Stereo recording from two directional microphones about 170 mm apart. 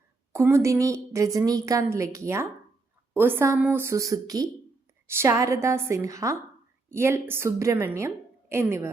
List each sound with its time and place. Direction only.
0.3 s a woman's voice: 15° right (ahead or behind)